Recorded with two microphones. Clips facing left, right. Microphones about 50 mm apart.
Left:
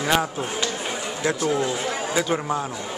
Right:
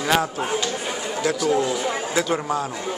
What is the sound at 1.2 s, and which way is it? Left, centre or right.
Speech, left.